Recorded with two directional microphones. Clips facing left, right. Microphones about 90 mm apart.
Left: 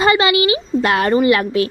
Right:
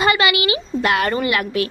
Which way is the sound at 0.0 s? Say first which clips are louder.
Left 3 dB; 30° left (ahead or behind).